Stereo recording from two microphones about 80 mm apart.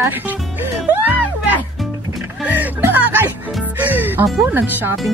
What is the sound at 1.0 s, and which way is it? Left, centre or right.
Music, right.